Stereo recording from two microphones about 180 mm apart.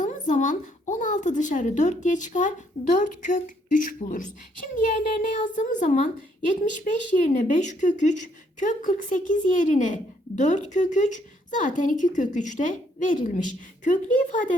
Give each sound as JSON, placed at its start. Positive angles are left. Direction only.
{"t": 0.0, "sound": "a woman's voice", "side_deg": 45}
{"t": 7.3, "sound": "a woman's voice", "side_deg": 45}